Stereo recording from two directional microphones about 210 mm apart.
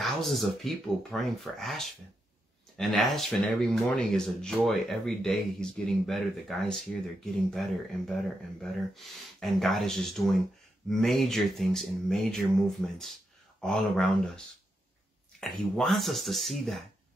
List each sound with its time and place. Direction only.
0.0 s speech: centre (ahead or behind)
8.9 s speech: centre (ahead or behind)
15.4 s speech: centre (ahead or behind)